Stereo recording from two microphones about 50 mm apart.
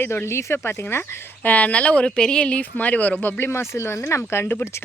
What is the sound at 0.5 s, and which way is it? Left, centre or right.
Speech, left.